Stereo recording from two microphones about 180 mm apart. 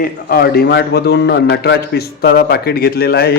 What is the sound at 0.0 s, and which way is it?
A man's voice, 55° left (ahead or behind).